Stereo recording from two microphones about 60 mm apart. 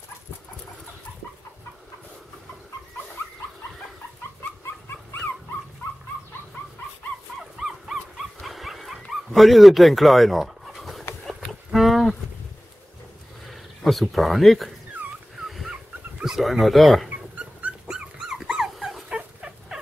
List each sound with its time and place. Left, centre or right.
7.6 s dog: centre
11.2 s a sound: centre
13.5 s a sound: centre
15.4 s dog: centre
15.7 s a sound: centre
16.3 s speech: centre
17.1 s dog: right
17.8 s dog: centre
19.1 s fowl: centre